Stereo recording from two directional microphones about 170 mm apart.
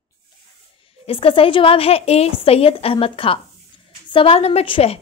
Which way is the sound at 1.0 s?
30° left (ahead or behind).